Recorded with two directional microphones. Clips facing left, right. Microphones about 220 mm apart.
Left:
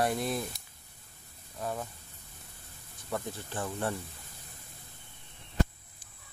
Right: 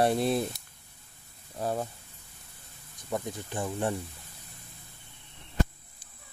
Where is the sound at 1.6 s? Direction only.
35° right (ahead or behind).